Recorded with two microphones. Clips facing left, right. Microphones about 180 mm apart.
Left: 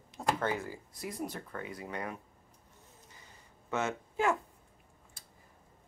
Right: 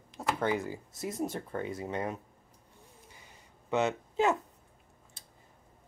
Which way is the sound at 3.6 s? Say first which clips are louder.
Right 5 dB; 20° right (ahead or behind).